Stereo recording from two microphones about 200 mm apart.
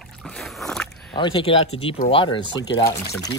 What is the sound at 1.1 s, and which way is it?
Speech, 25° left (ahead or behind).